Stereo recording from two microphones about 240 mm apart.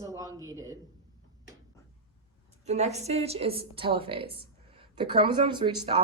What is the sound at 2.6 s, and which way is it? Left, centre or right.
A woman's voice, right.